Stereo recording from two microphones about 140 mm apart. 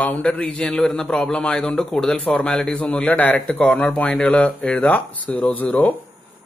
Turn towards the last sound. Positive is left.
turn(degrees=10)  # may be behind; listen again after turning